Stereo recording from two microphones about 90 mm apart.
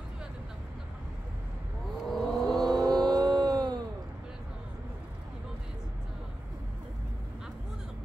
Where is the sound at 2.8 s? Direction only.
45° right (ahead or behind).